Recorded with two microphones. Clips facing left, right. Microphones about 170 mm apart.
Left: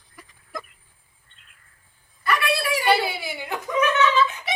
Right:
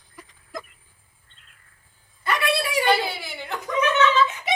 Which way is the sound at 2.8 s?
10° left (ahead or behind).